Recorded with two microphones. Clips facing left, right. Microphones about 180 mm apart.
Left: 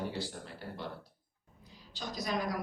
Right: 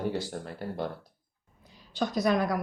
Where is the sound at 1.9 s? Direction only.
60° right (ahead or behind).